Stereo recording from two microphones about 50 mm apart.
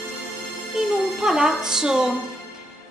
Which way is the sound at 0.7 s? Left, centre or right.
Centre.